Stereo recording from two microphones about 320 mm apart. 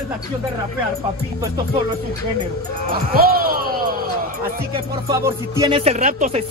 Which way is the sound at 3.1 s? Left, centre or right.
Right.